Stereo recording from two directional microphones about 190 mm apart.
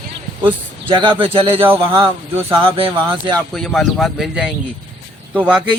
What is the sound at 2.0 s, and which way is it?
Speech, 30° right (ahead or behind).